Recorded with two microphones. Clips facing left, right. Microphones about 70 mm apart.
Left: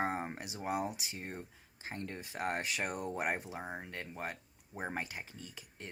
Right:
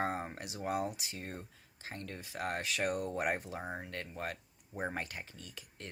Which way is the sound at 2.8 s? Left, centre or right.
Centre.